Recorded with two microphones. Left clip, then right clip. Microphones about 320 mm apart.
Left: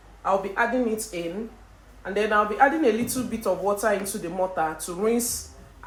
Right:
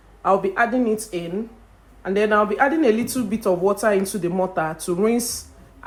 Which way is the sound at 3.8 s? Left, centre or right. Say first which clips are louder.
Right 5 dB; right.